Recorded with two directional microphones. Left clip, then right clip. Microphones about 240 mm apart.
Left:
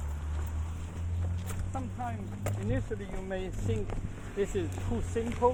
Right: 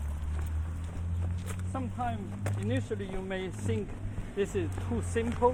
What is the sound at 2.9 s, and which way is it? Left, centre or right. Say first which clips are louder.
Speech: right 2 dB; right.